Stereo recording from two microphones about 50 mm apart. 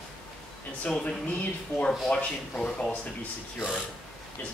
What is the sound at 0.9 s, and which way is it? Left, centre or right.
Speech, left.